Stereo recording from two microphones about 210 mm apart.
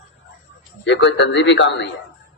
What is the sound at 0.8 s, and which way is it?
A man's voice, 55° left (ahead or behind).